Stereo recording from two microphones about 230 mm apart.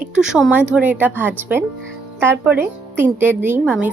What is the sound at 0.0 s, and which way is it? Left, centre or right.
A woman's voice, centre.